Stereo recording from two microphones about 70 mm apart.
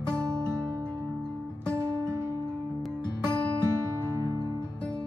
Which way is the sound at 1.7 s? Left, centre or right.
Right.